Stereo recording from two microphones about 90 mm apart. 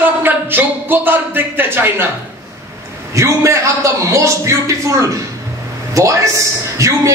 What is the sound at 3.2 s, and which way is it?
A man's voice, 30° right (ahead or behind).